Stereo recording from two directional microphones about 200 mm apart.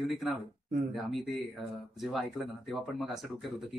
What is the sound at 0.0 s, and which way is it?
Speech, centre (ahead or behind).